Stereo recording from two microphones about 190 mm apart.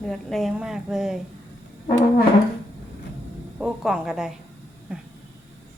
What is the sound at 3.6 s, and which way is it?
Speech, 5° right (ahead or behind).